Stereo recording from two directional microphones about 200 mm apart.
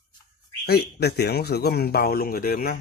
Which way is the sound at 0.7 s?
55° left (ahead or behind).